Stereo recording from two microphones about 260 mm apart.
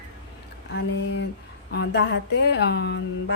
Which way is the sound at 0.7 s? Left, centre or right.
Left.